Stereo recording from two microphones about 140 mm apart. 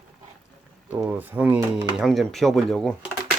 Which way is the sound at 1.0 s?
15° right (ahead or behind).